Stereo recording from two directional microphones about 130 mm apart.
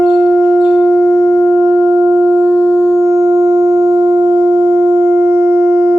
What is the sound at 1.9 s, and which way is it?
Wind instrument, 20° right (ahead or behind).